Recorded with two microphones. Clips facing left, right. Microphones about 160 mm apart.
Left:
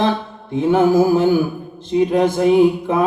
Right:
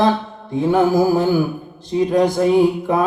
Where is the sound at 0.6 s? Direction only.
40° right (ahead or behind).